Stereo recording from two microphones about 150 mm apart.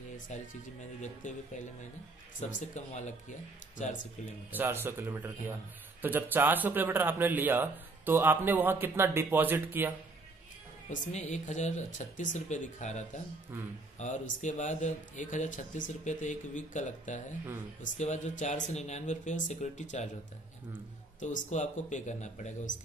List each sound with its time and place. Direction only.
0.3 s a man's voice: 50° left (ahead or behind)
2.7 s speech: 55° left (ahead or behind)
4.5 s speech: 15° right (ahead or behind)
10.9 s speech: 50° left (ahead or behind)
13.5 s speech: 15° right (ahead or behind)
13.9 s a man's voice: 55° left (ahead or behind)
21.2 s speech: 55° left (ahead or behind)